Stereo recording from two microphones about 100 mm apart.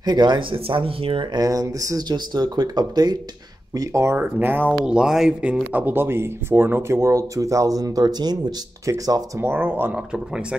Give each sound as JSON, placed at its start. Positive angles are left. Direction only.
{"t": 0.0, "sound": "speech", "side_deg": -50}
{"t": 1.4, "sound": "speech", "side_deg": -35}
{"t": 3.7, "sound": "speech", "side_deg": -35}
{"t": 4.2, "sound": "speech", "side_deg": -20}
{"t": 4.8, "sound": "speech", "side_deg": -5}
{"t": 9.4, "sound": "speech", "side_deg": -20}
{"t": 9.9, "sound": "speech", "side_deg": -10}